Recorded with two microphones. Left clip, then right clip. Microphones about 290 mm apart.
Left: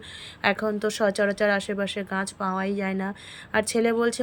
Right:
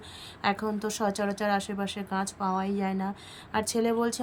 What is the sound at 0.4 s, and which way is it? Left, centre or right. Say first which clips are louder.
Speech: left 5 dB; centre.